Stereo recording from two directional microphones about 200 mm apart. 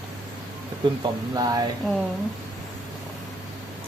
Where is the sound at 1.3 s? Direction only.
20° right (ahead or behind).